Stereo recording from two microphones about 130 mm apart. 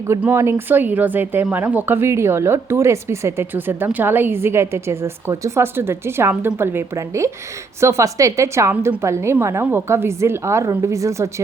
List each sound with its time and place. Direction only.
0.2 s speech: 20° right (ahead or behind)